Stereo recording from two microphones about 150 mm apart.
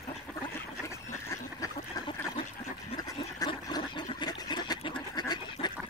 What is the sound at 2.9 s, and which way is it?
Toilet flush, 25° left (ahead or behind).